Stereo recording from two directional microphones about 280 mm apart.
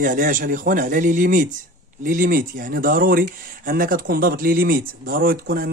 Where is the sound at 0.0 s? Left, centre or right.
Right.